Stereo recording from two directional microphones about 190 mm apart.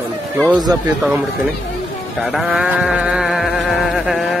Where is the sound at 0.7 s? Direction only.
20° right (ahead or behind).